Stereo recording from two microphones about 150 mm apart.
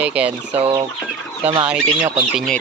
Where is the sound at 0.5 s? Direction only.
40° right (ahead or behind).